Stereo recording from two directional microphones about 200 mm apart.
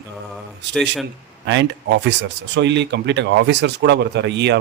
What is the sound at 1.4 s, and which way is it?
Speech, 60° right (ahead or behind).